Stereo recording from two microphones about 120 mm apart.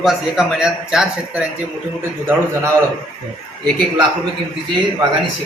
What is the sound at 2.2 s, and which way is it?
Speech, 20° right (ahead or behind).